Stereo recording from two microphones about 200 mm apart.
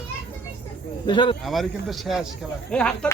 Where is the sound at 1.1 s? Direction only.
25° left (ahead or behind).